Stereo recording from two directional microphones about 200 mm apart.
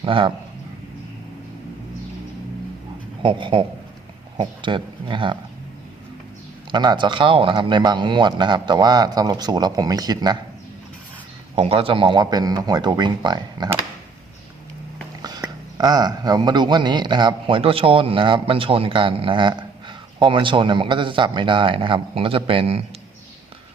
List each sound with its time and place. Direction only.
0.0 s a man's voice: 25° right (ahead or behind)
3.2 s a man's voice: 25° right (ahead or behind)
6.7 s a man's voice: 20° right (ahead or behind)
11.5 s a man's voice: 30° right (ahead or behind)
15.2 s a man's voice: 20° right (ahead or behind)